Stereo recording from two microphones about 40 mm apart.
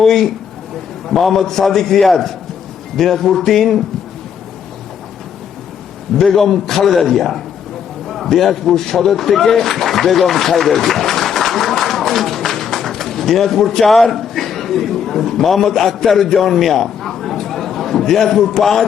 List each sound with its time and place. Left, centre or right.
0.0 s a man's voice: centre
6.1 s a man's voice: centre